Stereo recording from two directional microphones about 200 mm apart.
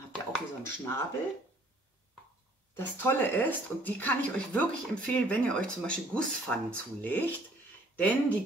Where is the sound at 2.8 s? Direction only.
10° left (ahead or behind).